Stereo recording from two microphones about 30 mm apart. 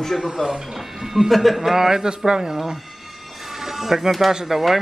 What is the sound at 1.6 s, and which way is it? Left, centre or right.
Speech, centre.